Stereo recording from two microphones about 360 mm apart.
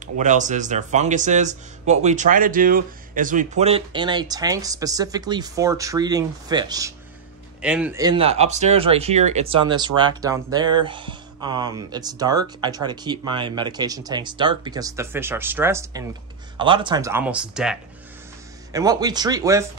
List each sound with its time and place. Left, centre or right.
0.0 s speech: centre